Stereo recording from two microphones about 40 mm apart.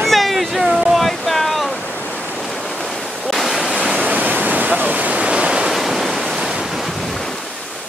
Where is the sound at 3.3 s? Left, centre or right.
Centre.